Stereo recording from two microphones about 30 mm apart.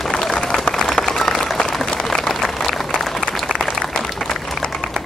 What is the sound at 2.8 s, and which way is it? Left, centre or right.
Applause, centre.